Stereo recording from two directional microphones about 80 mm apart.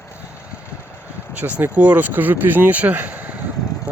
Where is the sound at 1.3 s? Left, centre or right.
Centre.